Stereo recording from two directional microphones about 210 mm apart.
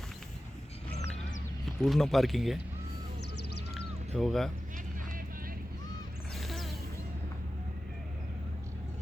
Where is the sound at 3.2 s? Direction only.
55° left (ahead or behind).